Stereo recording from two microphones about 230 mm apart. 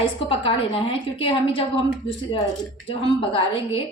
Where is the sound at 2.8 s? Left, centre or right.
Left.